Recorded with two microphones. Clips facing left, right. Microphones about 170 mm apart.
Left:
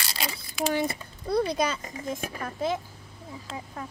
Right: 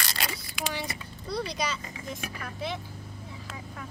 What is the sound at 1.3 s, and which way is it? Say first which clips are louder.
A child's voice: left 6 dB; 55° left (ahead or behind).